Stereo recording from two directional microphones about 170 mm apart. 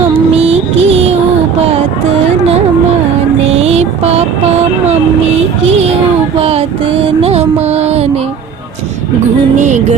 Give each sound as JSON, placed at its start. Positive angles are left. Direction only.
{"t": 0.1, "sound": "music", "side_deg": -35}
{"t": 3.5, "sound": "mantra", "side_deg": -40}
{"t": 6.4, "sound": "a sound", "side_deg": -35}
{"t": 9.6, "sound": "music", "side_deg": -45}